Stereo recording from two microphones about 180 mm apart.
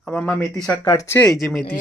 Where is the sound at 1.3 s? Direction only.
Centre (ahead or behind).